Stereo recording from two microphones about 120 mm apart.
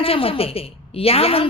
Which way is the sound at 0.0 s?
50° left (ahead or behind).